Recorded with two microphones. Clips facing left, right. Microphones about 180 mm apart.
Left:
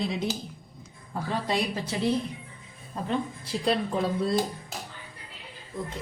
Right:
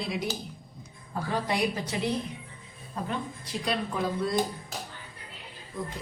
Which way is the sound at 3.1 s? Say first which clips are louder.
Left 7 dB; 30° left (ahead or behind).